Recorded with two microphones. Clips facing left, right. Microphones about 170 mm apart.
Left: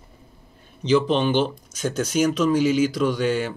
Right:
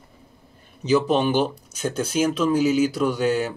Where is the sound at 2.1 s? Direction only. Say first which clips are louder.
Left 1 dB; 30° right (ahead or behind).